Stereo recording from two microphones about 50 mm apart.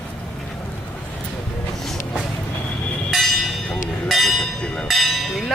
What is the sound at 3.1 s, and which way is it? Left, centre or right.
Bell, centre.